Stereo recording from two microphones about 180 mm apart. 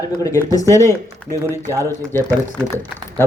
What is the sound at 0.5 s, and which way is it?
Speech, 15° left (ahead or behind).